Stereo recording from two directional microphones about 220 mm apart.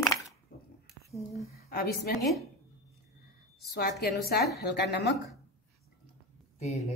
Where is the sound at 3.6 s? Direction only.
45° left (ahead or behind).